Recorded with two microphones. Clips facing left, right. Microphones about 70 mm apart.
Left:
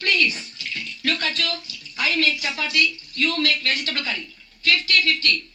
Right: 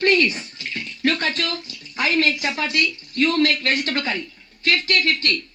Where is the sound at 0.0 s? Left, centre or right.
Right.